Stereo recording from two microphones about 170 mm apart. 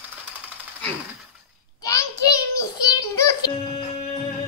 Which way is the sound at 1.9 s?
20° left (ahead or behind).